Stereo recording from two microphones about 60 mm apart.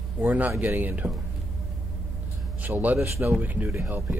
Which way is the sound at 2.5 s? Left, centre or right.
Right.